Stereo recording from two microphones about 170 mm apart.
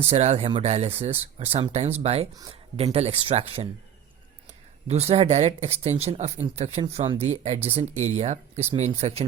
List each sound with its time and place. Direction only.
0.0 s speech: 40° right (ahead or behind)
2.3 s speech: 20° right (ahead or behind)
2.7 s speech: 35° right (ahead or behind)
4.9 s speech: 35° right (ahead or behind)